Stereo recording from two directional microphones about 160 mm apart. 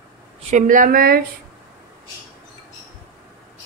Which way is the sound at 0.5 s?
55° right (ahead or behind).